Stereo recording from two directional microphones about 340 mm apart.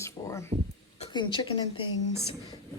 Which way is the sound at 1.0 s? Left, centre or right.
Centre.